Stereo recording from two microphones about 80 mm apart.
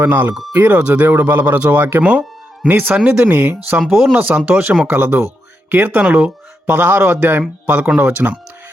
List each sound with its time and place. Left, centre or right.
0.0 s speech: right
3.8 s speech: centre
4.1 s speech: centre